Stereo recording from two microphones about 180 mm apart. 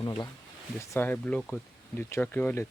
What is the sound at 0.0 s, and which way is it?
Speech, 20° left (ahead or behind).